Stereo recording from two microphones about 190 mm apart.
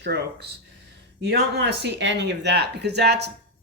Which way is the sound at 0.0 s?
60° right (ahead or behind).